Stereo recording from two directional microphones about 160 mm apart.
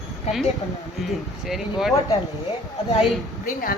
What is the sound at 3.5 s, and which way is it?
Speech, 65° left (ahead or behind).